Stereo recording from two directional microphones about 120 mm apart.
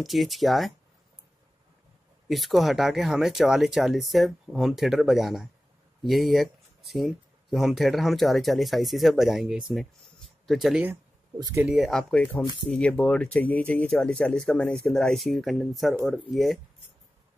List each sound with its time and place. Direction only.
0.0 s speech: centre (ahead or behind)
2.2 s speech: centre (ahead or behind)
11.3 s speech: 30° right (ahead or behind)
11.6 s speech: 5° right (ahead or behind)